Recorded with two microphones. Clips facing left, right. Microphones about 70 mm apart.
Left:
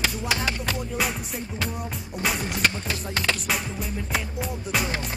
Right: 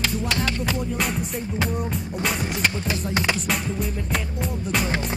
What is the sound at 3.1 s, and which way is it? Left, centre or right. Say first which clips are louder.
Music: right 2 dB; centre.